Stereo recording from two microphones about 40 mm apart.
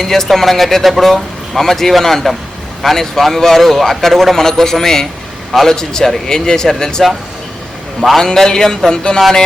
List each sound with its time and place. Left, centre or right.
0.0 s a man's voice: centre
8.2 s a man's voice: centre